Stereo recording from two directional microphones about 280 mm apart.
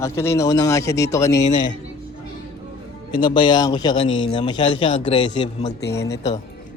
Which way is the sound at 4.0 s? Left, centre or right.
Left.